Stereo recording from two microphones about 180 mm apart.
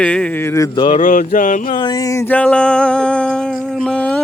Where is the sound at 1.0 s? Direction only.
45° left (ahead or behind).